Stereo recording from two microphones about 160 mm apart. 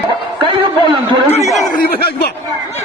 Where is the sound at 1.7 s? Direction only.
80° left.